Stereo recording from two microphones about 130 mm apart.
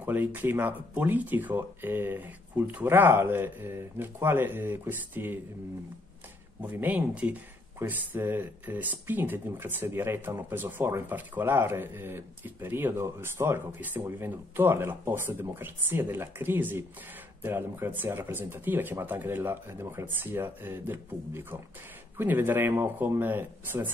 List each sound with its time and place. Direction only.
0.0 s speech: 15° right (ahead or behind)
6.6 s speech: 15° right (ahead or behind)